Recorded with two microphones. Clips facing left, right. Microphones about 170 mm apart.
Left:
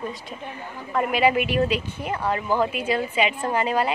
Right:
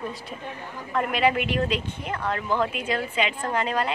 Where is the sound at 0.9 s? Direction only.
5° left (ahead or behind).